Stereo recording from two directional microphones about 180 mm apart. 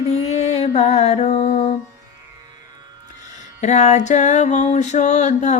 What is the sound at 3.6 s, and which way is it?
Music, 40° left (ahead or behind).